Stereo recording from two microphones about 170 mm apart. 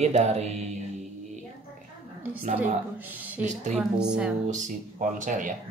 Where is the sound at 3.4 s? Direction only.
45° right (ahead or behind).